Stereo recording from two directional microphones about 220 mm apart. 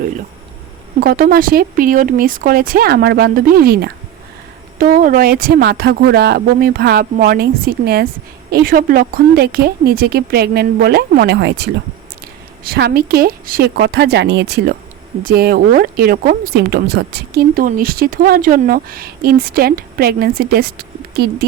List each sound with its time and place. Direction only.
0.9 s speech: 40° right (ahead or behind)